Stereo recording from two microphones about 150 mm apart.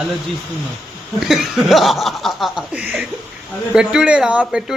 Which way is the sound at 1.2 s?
Centre (ahead or behind).